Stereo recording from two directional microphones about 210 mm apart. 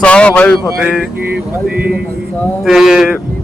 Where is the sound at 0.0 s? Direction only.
5° left (ahead or behind).